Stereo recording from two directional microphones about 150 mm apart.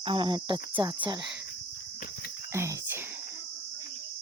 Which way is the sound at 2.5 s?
15° right (ahead or behind).